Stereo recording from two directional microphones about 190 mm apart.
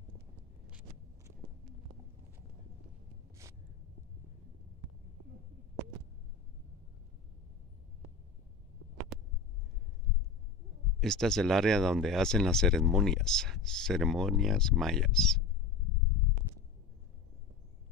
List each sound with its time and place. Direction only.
0.7 s vehicle: 5° right (ahead or behind)
9.1 s a sound: centre (ahead or behind)
11.0 s speech: 5° left (ahead or behind)